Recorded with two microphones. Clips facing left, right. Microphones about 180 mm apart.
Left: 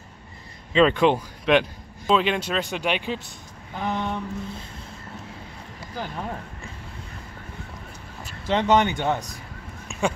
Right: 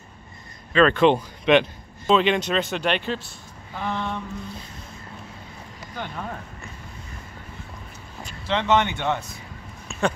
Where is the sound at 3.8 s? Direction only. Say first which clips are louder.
Left 1 dB; 15° left (ahead or behind).